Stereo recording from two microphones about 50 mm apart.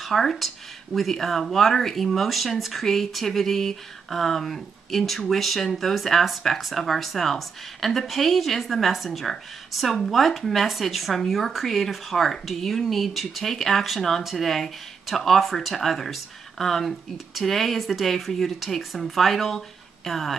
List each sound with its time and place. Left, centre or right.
0.0 s a woman's voice: centre